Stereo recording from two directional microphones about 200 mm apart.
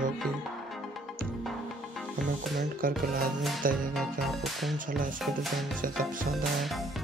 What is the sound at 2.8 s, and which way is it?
Speech, 45° right (ahead or behind).